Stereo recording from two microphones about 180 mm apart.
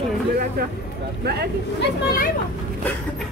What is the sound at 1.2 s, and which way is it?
Speech, 65° right (ahead or behind).